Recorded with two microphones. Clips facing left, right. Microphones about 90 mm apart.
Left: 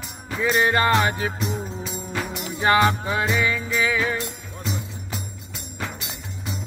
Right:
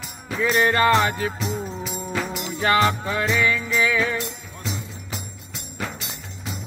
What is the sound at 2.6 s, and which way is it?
Music, 20° left (ahead or behind).